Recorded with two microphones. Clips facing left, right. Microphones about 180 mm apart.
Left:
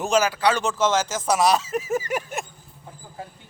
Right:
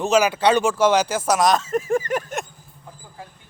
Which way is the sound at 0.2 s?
20° right (ahead or behind).